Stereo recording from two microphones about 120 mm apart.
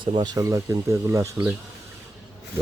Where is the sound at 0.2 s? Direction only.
30° right (ahead or behind).